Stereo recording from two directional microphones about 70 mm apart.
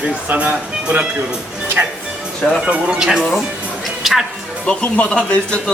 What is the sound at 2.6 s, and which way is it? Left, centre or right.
Speech, centre.